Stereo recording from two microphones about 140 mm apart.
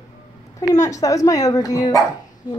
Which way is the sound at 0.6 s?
25° left (ahead or behind).